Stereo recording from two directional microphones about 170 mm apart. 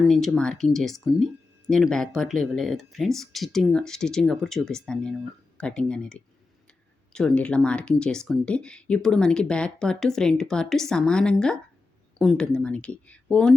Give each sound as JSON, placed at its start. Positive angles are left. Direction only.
{"t": 0.0, "sound": "speech", "side_deg": 0}